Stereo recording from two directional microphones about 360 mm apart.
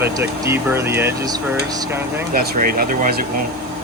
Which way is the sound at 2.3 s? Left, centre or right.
Right.